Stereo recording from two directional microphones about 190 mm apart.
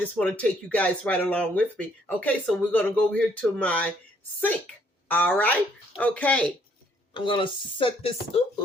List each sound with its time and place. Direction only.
0.0 s a woman's voice: 5° left (ahead or behind)
7.1 s speech: 25° left (ahead or behind)